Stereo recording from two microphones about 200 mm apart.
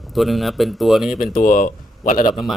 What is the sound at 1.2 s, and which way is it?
Speech, 45° left (ahead or behind).